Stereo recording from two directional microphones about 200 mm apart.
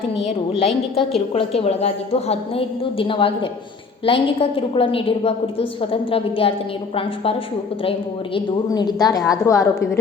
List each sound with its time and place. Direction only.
0.9 s a woman's voice: 30° left (ahead or behind)